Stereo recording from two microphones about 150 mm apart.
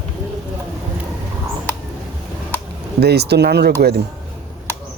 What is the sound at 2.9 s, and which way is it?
Speech, 90° right.